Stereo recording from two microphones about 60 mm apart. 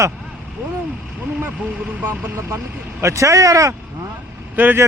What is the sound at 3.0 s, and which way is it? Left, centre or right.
Speech, right.